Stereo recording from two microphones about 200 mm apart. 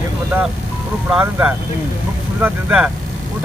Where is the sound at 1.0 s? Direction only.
5° right (ahead or behind).